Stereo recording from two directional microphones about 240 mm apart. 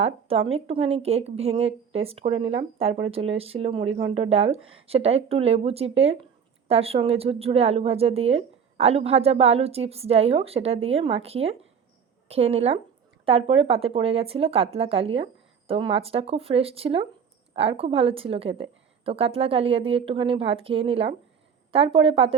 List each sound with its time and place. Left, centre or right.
0.0 s speech: right